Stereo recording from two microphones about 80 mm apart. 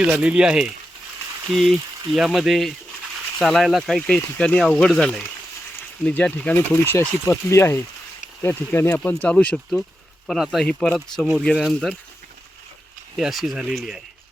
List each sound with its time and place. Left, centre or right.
0.1 s speech: centre
10.2 s speech: centre
10.7 s speech: centre
10.9 s speech: centre
13.1 s speech: centre